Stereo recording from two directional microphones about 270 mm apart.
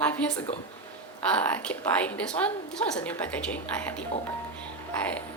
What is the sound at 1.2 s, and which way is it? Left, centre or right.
A woman's voice, centre.